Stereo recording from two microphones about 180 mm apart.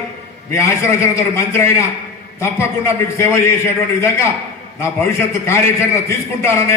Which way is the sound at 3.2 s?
15° left (ahead or behind).